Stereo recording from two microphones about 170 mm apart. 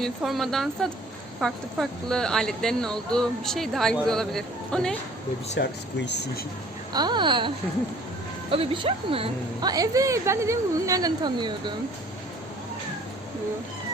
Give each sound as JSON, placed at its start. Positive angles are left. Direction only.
{"t": 0.0, "sound": "speech", "side_deg": 0}
{"t": 5.5, "sound": "speech", "side_deg": 85}
{"t": 6.9, "sound": "a woman's voice", "side_deg": -25}